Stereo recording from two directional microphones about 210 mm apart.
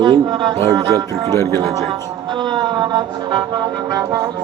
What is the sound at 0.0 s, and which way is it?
Brass instrument, 20° right (ahead or behind).